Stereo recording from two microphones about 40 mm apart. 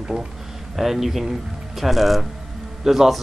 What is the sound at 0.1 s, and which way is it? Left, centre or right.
Speech, right.